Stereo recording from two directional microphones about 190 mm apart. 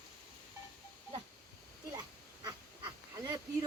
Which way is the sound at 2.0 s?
20° right (ahead or behind).